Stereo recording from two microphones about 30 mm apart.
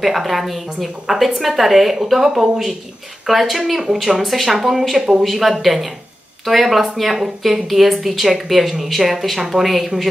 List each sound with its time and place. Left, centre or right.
0.0 s a woman's voice: centre
3.8 s a woman's voice: centre